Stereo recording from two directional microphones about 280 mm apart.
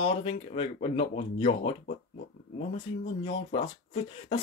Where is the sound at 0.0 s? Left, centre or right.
Left.